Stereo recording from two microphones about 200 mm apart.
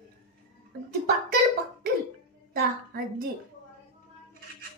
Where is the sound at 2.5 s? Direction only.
50° right (ahead or behind).